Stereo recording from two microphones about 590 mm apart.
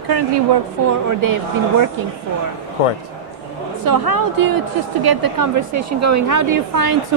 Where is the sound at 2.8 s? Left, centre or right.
Left.